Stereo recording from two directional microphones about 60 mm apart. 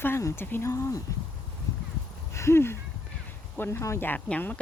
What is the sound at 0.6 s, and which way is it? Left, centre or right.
Speech, left.